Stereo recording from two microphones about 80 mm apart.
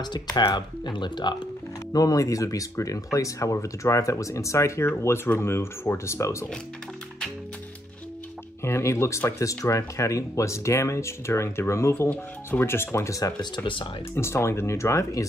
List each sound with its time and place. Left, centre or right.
0.0 s speech: left
1.9 s speech: left
8.6 s speech: left